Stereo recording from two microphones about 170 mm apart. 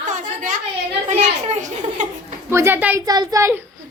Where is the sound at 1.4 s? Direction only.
45° right (ahead or behind).